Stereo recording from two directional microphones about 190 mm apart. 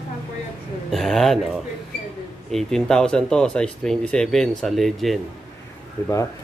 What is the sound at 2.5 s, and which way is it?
Speech, centre (ahead or behind).